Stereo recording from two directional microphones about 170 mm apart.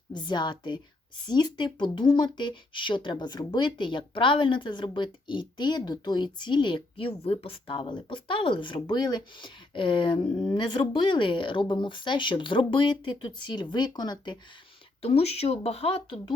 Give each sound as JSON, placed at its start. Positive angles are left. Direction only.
{"t": 0.1, "sound": "speech", "side_deg": 25}
{"t": 15.0, "sound": "speech", "side_deg": 35}